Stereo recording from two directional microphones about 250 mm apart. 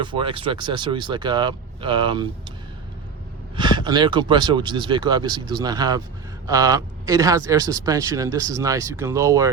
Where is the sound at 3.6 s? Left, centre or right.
Centre.